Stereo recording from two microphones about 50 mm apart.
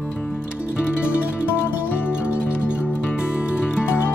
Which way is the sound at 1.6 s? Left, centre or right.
Left.